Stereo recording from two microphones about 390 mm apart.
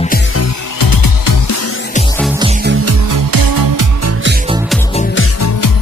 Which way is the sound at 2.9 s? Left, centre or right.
Right.